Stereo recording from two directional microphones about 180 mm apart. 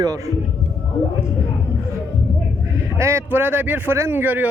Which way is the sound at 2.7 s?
15° right (ahead or behind).